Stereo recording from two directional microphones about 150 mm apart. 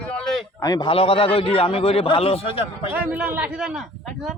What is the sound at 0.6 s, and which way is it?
A man's voice, 25° left (ahead or behind).